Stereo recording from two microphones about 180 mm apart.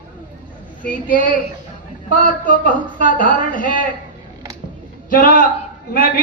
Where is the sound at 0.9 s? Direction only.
50° left (ahead or behind).